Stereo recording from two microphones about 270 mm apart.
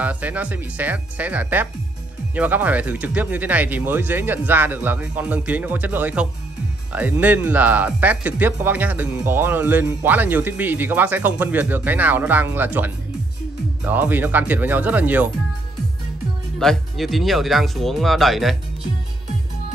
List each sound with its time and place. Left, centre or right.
0.0 s speech: centre
16.5 s speech: centre